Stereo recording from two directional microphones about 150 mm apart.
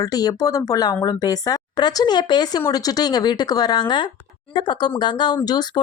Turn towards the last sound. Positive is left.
turn(degrees=25)  # may be behind; listen again after turning